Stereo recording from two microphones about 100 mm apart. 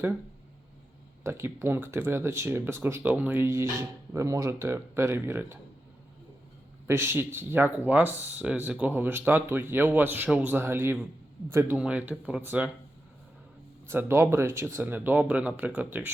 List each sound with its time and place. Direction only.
1.2 s speech: 25° right (ahead or behind)
6.8 s speech: 25° right (ahead or behind)
11.8 s speech: 10° right (ahead or behind)
13.8 s speech: 20° right (ahead or behind)